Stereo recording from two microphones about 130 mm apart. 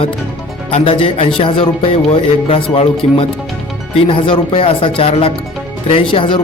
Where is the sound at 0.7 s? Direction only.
50° left (ahead or behind).